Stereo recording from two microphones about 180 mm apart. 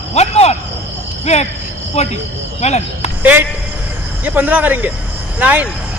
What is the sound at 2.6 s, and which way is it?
Speech, 40° left (ahead or behind).